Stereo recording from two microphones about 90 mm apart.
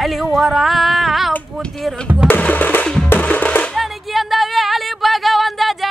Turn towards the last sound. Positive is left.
turn(degrees=0)  # may be behind; listen again after turning